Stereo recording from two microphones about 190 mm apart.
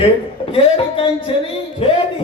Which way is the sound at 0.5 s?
30° left (ahead or behind).